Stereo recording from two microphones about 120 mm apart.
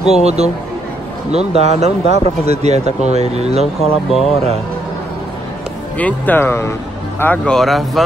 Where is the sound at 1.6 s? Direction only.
65° right (ahead or behind).